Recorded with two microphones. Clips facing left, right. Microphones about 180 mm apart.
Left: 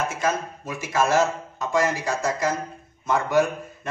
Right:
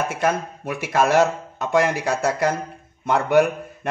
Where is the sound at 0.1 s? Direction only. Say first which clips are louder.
Right 3 dB; 60° right (ahead or behind).